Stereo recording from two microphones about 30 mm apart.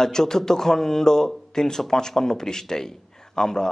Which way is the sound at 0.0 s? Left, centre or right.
Centre.